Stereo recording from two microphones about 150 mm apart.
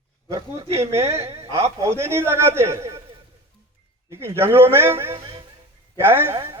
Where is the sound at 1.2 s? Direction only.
45° right (ahead or behind).